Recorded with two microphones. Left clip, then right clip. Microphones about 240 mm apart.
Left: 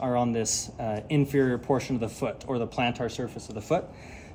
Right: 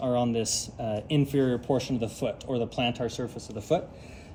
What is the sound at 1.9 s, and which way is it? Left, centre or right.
Speech, centre.